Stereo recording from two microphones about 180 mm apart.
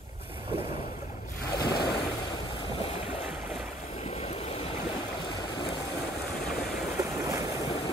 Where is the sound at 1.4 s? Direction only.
60° left (ahead or behind).